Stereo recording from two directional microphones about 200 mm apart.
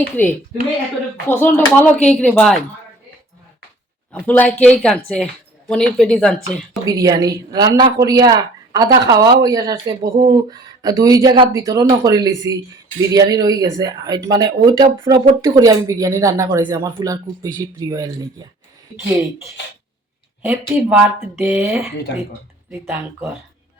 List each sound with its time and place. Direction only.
0.2 s a woman's voice: 10° left (ahead or behind)
4.1 s a woman's voice: 5° left (ahead or behind)
6.8 s speech: 15° right (ahead or behind)
20.5 s speech: 10° right (ahead or behind)